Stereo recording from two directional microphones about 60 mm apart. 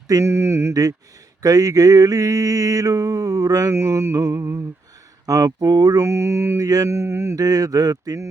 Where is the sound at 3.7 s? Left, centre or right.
Right.